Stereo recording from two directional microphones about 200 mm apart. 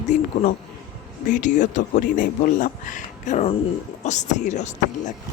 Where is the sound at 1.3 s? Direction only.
40° left (ahead or behind).